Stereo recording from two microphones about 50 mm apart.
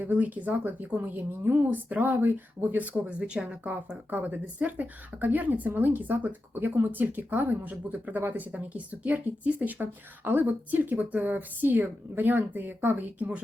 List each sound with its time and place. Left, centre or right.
0.0 s a woman's voice: right
1.6 s speech: right
3.0 s speech: right
4.1 s speech: right